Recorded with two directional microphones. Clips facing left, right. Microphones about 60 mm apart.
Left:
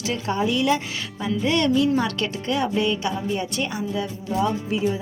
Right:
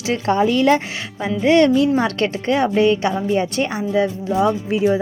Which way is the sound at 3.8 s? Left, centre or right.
Right.